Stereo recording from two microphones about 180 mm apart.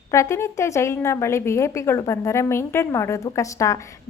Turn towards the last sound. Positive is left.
turn(degrees=15)  # may be behind; listen again after turning